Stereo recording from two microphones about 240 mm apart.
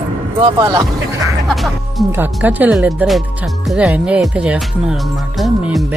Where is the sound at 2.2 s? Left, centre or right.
Centre.